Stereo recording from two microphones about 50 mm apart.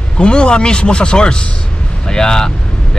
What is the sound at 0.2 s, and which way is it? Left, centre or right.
A man's voice, centre.